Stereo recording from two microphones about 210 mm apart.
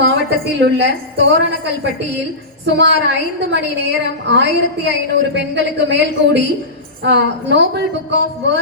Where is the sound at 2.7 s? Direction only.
55° right (ahead or behind).